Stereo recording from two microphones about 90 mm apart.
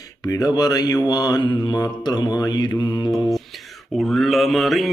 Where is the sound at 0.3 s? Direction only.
45° left (ahead or behind).